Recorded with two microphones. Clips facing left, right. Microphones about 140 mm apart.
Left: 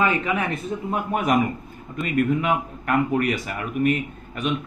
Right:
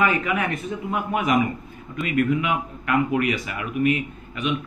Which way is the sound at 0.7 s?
35° left (ahead or behind).